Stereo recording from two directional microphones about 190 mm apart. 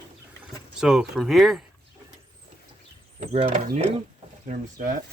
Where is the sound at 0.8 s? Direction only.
5° right (ahead or behind).